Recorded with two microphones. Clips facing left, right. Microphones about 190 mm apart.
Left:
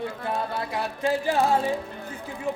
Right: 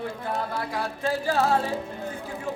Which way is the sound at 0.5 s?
20° left (ahead or behind).